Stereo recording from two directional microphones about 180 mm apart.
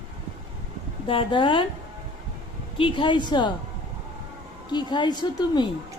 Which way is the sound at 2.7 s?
30° left (ahead or behind).